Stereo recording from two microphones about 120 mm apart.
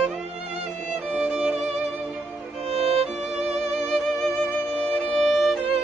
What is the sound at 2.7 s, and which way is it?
Music, 55° right (ahead or behind).